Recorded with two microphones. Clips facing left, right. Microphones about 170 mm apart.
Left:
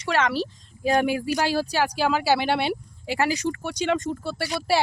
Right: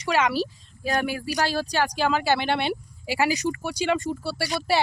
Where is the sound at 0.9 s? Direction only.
20° left (ahead or behind).